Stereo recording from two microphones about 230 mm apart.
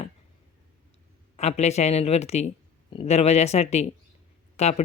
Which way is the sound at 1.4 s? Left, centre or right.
Left.